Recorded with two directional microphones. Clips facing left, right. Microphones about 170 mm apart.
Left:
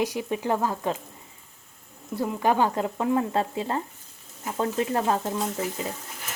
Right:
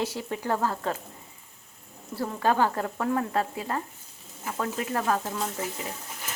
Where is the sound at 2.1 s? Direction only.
15° left (ahead or behind).